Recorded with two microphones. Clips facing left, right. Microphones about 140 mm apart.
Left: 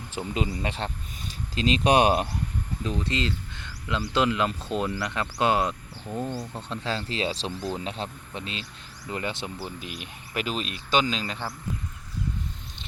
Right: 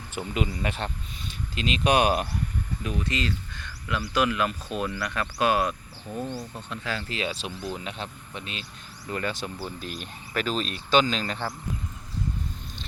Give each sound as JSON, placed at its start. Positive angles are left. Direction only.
{"t": 0.1, "sound": "speech", "side_deg": 30}
{"t": 6.5, "sound": "speech", "side_deg": 30}
{"t": 9.0, "sound": "speech", "side_deg": 20}
{"t": 9.6, "sound": "speech", "side_deg": 10}